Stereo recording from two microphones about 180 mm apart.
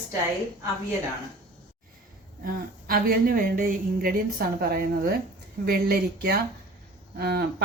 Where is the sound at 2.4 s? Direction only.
55° right (ahead or behind).